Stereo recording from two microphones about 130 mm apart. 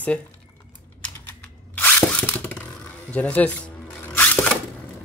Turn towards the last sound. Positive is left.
turn(degrees=15)  # may be behind; listen again after turning